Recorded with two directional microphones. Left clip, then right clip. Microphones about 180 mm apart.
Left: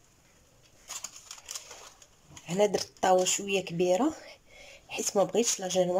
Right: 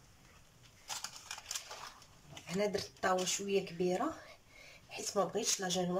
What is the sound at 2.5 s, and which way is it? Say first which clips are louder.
Speech: left 9 dB; 45° left (ahead or behind).